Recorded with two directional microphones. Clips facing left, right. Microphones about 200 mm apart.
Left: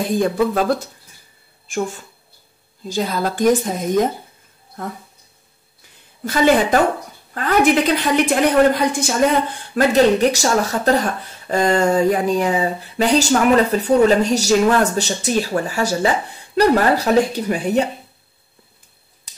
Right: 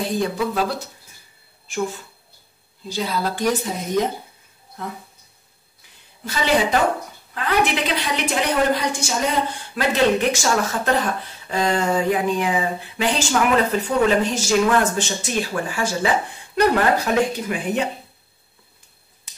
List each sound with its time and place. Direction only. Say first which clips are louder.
0.1 s a woman's voice: left 5 dB; 50° left (ahead or behind)
6.2 s a woman's voice: left 5 dB; 50° left (ahead or behind)
10.3 s speech: left 3 dB; 40° left (ahead or behind)